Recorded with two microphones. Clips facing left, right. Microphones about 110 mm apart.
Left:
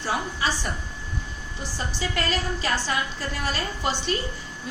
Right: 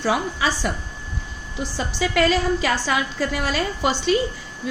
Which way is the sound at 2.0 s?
90° right.